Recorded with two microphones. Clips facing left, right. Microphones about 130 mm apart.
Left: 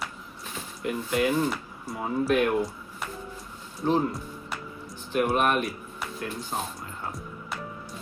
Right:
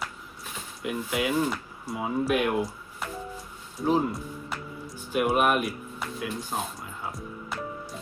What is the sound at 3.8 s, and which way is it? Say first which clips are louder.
Music: even; 5° right (ahead or behind).